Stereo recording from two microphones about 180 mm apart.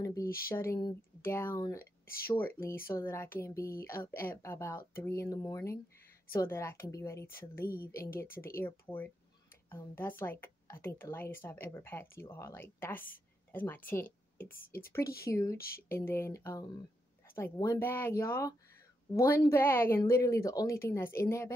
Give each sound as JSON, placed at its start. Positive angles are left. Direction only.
{"t": 0.0, "sound": "speech", "side_deg": 20}
{"t": 1.8, "sound": "speech", "side_deg": 55}
{"t": 2.3, "sound": "speech", "side_deg": 10}